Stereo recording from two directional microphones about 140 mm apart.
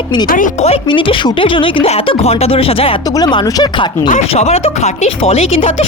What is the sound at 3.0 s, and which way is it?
Speech, 30° left (ahead or behind).